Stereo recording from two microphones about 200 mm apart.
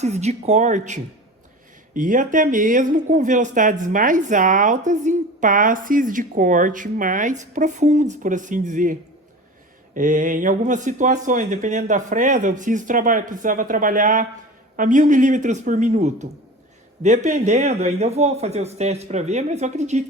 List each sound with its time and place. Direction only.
0.0 s speech: 35° right (ahead or behind)